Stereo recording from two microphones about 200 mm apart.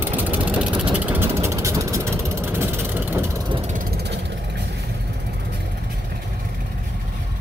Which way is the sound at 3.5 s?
40° right (ahead or behind).